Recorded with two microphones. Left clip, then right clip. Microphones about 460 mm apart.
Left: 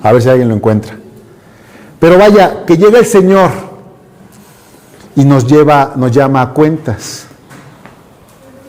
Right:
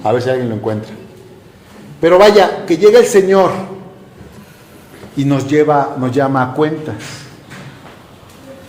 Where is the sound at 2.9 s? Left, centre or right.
Left.